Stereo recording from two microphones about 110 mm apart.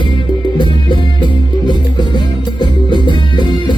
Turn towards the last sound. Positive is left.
turn(degrees=45)  # may be behind; listen again after turning